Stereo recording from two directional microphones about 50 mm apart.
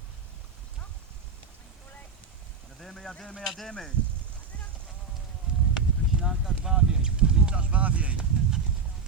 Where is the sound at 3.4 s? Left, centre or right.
Centre.